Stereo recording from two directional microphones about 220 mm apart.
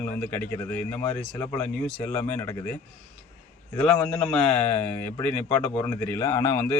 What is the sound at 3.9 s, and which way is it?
Speech, 5° left (ahead or behind).